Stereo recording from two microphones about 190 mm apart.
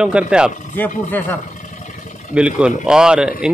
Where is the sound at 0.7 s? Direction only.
10° left (ahead or behind).